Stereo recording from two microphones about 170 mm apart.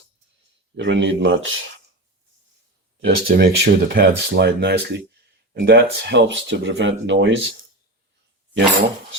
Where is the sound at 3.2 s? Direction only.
60° right (ahead or behind).